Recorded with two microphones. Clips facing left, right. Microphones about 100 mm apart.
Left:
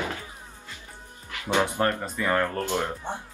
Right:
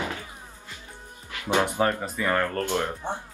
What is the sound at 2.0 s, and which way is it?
Speech, centre (ahead or behind).